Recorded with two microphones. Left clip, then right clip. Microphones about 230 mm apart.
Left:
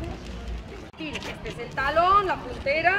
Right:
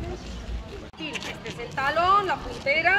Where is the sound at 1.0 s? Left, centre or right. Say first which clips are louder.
Right 1 dB; centre.